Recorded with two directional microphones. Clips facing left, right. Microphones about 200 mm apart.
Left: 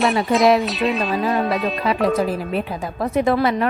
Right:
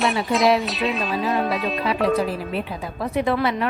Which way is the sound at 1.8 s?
45° left (ahead or behind).